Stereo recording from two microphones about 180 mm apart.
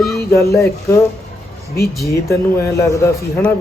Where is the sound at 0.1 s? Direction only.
15° left (ahead or behind).